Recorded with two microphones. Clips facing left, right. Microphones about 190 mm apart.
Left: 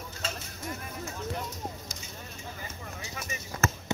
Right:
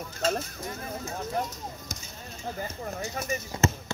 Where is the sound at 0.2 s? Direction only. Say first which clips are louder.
Right 11 dB; 40° right (ahead or behind).